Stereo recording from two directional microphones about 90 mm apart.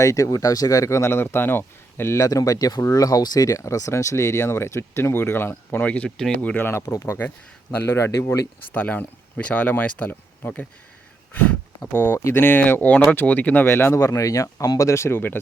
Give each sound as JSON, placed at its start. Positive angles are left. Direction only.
{"t": 0.0, "sound": "speech", "side_deg": 40}
{"t": 2.1, "sound": "speech", "side_deg": 40}
{"t": 6.1, "sound": "speech", "side_deg": 5}
{"t": 6.4, "sound": "speech", "side_deg": 20}
{"t": 8.7, "sound": "speech", "side_deg": 20}
{"t": 11.9, "sound": "speech", "side_deg": 25}